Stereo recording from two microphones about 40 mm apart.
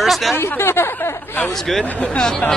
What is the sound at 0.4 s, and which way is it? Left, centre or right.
Speech, left.